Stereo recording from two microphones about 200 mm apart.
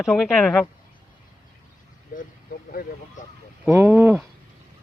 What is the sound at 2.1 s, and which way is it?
Speech, 45° left (ahead or behind).